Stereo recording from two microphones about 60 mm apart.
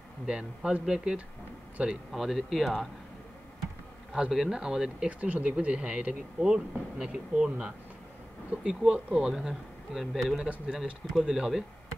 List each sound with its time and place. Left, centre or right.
0.3 s speech: centre
4.1 s speech: centre
5.2 s speech: right; by 11.6 s centre